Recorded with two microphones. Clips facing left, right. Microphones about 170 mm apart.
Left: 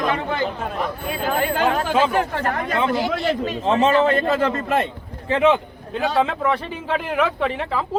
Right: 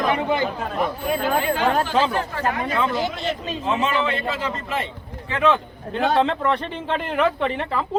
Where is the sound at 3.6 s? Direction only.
35° left (ahead or behind); by 4.8 s 55° left (ahead or behind).